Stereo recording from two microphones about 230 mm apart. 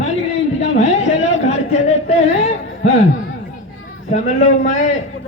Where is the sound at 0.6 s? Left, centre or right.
Left.